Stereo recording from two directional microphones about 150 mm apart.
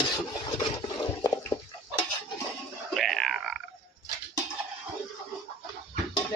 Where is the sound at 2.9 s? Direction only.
Centre (ahead or behind).